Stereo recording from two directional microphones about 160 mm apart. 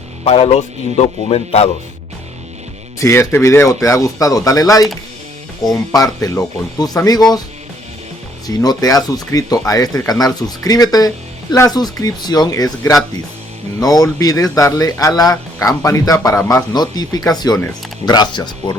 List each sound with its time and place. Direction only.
0.3 s speech: 40° left (ahead or behind)
3.0 s speech: 15° left (ahead or behind)
8.4 s speech: 25° left (ahead or behind)